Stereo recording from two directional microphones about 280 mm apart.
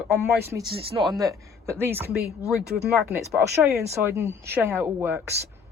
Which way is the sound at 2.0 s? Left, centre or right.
Right.